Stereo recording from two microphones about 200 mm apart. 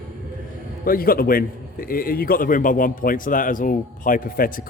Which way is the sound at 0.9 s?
45° left (ahead or behind).